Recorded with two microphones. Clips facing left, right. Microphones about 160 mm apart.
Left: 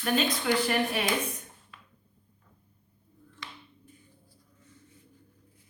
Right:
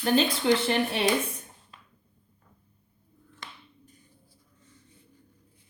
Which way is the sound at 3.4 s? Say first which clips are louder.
Even; 50° right (ahead or behind).